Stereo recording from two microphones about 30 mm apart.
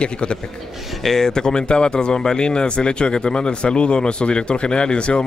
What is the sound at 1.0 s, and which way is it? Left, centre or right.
Speech, centre.